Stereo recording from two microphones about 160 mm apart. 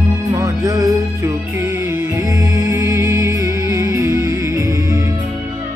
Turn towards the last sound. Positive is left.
turn(degrees=-20)  # may be behind; listen again after turning